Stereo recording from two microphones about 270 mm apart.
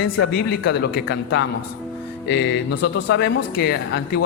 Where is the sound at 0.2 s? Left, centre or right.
Left.